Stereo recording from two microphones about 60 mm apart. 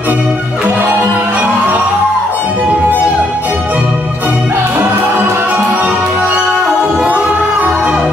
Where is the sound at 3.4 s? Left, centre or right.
Right.